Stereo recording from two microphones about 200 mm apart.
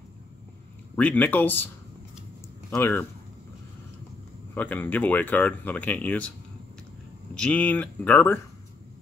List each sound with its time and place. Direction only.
0.9 s speech: 10° left (ahead or behind)
2.7 s speech: 10° left (ahead or behind)
4.6 s speech: 10° left (ahead or behind)
7.3 s speech: 5° left (ahead or behind)